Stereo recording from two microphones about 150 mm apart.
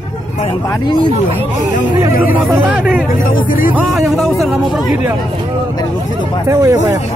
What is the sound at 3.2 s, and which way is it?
Speech, 65° left (ahead or behind).